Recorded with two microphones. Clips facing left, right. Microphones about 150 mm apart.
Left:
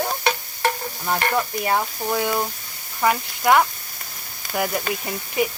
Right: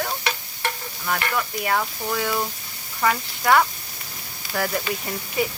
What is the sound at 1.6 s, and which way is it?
Speech, 20° left (ahead or behind).